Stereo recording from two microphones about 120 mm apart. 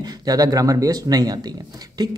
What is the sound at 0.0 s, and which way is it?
Speech, 35° right (ahead or behind).